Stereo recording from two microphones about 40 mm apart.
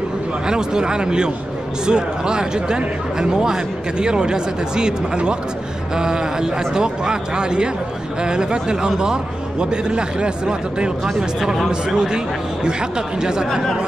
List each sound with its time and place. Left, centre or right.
0.5 s a man's voice: centre